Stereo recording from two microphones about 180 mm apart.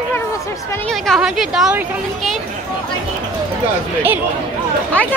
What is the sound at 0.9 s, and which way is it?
Speech, centre (ahead or behind).